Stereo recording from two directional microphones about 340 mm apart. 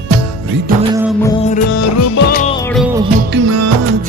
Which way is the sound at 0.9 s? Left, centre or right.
Centre.